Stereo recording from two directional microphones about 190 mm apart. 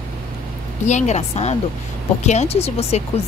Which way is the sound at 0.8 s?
40° left (ahead or behind).